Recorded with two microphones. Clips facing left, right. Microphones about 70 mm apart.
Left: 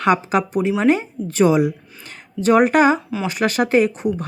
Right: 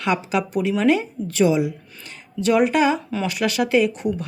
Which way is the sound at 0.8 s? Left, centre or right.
Left.